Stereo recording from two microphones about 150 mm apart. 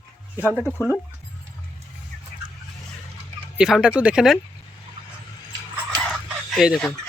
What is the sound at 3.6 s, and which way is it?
Speech, 5° right (ahead or behind).